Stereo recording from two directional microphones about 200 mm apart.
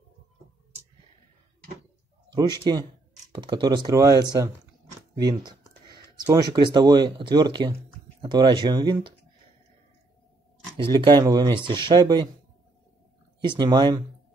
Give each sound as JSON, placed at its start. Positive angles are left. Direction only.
{"t": 2.7, "sound": "speech", "side_deg": -20}
{"t": 10.8, "sound": "speech", "side_deg": -25}
{"t": 13.4, "sound": "speech", "side_deg": -20}